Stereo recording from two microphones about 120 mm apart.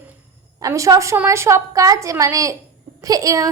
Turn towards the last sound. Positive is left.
turn(degrees=-30)  # may be behind; listen again after turning